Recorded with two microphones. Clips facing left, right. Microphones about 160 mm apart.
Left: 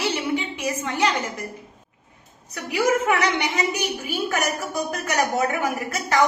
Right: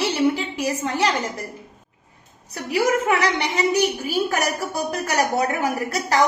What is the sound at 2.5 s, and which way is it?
Speech, 35° right (ahead or behind).